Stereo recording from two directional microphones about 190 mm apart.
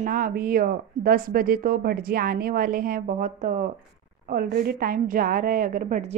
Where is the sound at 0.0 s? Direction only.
50° right (ahead or behind).